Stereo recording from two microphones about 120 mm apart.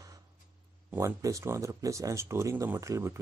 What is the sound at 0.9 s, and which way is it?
Speech, 25° right (ahead or behind).